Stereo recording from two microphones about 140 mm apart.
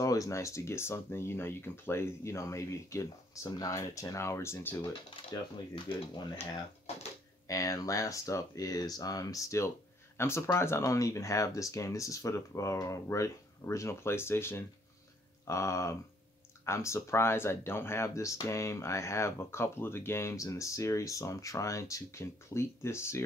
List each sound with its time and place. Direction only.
0.0 s speech: 25° left (ahead or behind)
5.9 s speech: 40° left (ahead or behind)
7.4 s speech: 25° left (ahead or behind)